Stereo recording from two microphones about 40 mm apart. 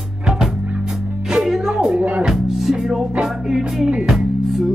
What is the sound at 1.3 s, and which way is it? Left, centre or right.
Music, centre.